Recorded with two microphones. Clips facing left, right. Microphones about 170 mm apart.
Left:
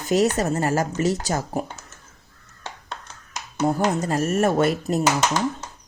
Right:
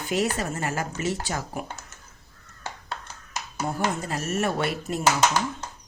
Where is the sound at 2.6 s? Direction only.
5° right (ahead or behind).